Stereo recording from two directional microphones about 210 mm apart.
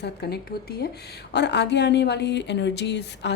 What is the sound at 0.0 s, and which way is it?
A woman's voice, 50° left (ahead or behind).